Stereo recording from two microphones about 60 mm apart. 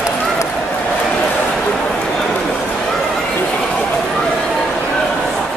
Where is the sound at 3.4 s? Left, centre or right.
Centre.